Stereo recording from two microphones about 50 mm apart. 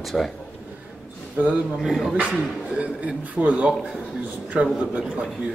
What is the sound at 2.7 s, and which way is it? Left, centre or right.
Speech, right.